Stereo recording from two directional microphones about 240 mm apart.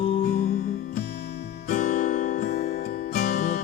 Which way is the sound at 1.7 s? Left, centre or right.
Left.